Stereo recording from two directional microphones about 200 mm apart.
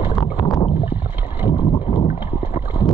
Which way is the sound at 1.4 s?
20° left (ahead or behind).